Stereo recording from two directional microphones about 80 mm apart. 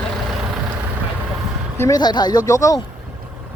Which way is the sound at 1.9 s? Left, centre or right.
Left.